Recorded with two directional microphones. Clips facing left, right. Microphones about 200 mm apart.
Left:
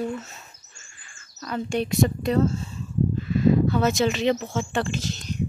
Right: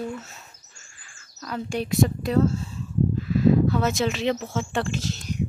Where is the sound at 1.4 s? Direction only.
Centre (ahead or behind).